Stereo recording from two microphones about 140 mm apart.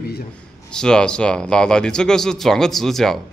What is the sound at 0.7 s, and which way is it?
Speech, 5° left (ahead or behind).